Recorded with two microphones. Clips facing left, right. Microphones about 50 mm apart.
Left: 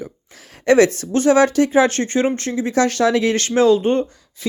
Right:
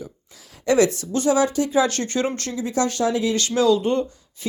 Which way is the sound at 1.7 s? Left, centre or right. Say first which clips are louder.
Left 5 dB; left.